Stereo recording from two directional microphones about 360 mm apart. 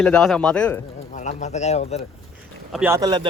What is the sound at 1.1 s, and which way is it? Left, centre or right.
Speech, centre.